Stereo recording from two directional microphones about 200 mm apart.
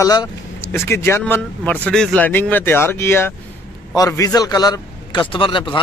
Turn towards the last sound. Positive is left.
turn(degrees=25)  # may be behind; listen again after turning